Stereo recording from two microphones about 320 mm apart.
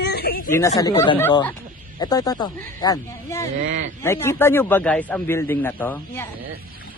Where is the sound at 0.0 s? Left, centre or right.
Left.